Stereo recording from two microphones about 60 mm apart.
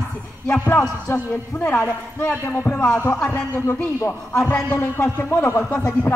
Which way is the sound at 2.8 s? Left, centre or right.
Centre.